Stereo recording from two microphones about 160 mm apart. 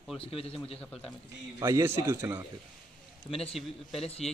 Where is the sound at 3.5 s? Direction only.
Centre (ahead or behind).